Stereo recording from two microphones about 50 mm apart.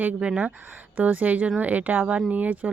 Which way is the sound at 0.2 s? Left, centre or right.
Right.